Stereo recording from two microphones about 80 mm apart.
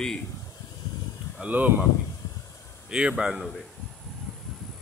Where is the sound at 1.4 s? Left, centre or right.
Centre.